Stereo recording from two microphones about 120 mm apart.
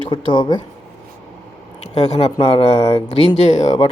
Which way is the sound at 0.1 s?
40° left (ahead or behind).